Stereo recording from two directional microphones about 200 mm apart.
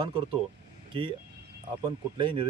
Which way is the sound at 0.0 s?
25° right (ahead or behind).